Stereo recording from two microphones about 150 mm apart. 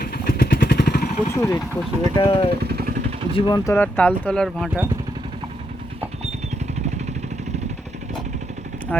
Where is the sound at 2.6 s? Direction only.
90° right.